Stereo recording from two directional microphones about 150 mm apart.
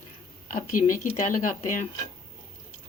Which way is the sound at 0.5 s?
60° left (ahead or behind).